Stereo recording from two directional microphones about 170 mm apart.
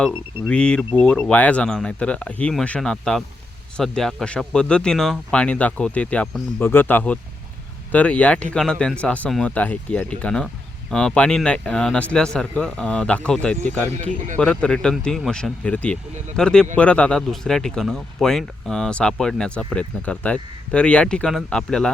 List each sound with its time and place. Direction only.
0.0 s a man's voice: 5° left (ahead or behind)
13.9 s speech: 40° right (ahead or behind)
14.3 s a man's voice: 5° left (ahead or behind)